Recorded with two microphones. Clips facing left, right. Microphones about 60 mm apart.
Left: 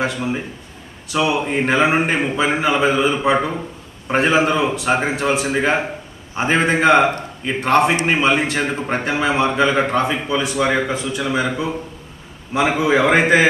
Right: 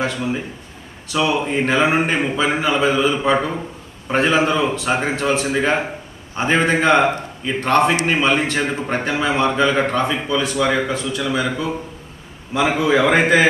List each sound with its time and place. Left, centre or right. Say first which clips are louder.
0.0 s a man's voice: even; centre
9.0 s a man's voice: left 1 dB; centre
12.7 s a man's voice: even; centre